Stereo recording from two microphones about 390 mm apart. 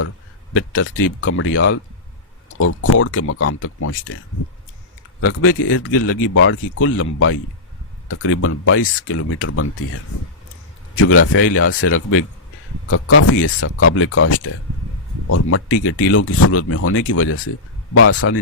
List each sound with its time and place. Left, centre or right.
0.5 s speech: left
5.2 s speech: left
10.9 s speech: left